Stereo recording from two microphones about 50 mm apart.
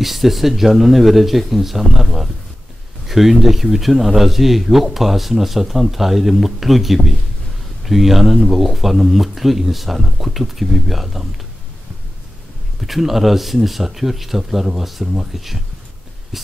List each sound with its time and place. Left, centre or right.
0.0 s speech: centre
12.8 s speech: centre